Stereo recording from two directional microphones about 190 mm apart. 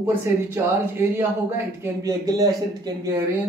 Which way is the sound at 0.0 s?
10° right (ahead or behind).